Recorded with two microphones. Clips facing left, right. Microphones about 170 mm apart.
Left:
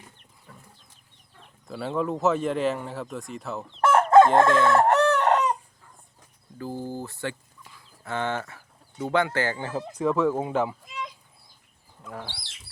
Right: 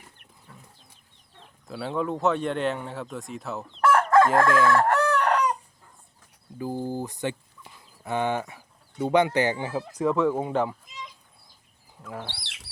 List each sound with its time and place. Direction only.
1.6 s speech: centre (ahead or behind)
3.8 s chicken: 25° left (ahead or behind)
6.6 s speech: 15° right (ahead or behind)
10.0 s speech: centre (ahead or behind)
10.8 s a sound: 60° left (ahead or behind)
12.0 s speech: 5° right (ahead or behind)
12.4 s bird: 70° right (ahead or behind)